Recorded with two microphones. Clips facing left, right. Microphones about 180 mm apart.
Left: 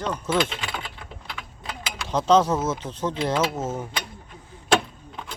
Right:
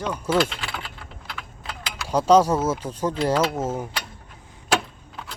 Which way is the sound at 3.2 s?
Centre (ahead or behind).